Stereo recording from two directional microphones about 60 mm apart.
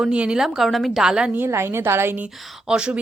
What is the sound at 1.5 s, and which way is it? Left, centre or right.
Speech, right.